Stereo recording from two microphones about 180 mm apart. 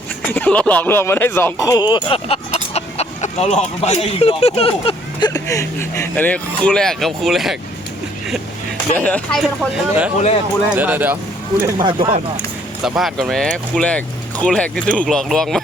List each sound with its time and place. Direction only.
0.3 s speech: 5° left (ahead or behind); by 5.3 s 30° left (ahead or behind)
5.3 s speech: 20° left (ahead or behind); by 7.5 s centre (ahead or behind)
9.0 s speech: 10° left (ahead or behind)
9.4 s speech: centre (ahead or behind)
11.6 s speech: 25° right (ahead or behind)
12.8 s speech: centre (ahead or behind)